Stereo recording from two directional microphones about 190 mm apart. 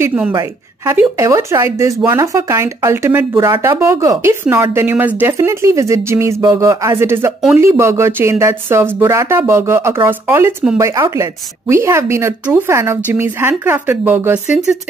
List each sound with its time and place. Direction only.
0.0 s a woman's voice: 10° right (ahead or behind)